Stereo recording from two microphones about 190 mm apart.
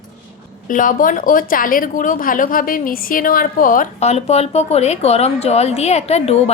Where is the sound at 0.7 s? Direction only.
45° left (ahead or behind).